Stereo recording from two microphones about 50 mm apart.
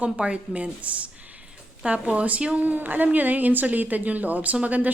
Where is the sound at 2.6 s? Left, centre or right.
Right.